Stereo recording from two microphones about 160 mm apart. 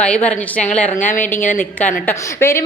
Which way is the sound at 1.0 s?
55° left (ahead or behind).